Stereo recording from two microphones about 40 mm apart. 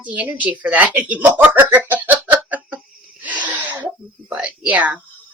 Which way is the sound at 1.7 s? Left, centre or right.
Right.